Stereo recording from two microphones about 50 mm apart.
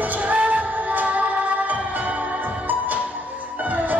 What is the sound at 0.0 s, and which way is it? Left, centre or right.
Music, right.